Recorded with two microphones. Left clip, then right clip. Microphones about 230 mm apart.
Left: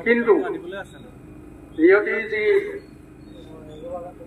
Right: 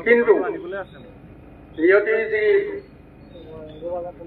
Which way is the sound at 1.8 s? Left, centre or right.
Left.